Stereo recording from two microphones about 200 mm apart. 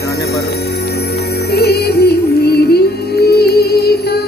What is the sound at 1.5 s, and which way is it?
Music, 55° left (ahead or behind).